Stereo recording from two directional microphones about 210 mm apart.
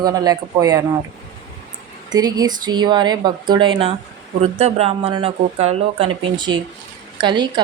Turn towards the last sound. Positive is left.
turn(degrees=-20)  # may be behind; listen again after turning